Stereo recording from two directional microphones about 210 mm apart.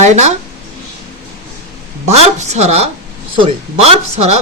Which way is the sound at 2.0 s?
30° right (ahead or behind).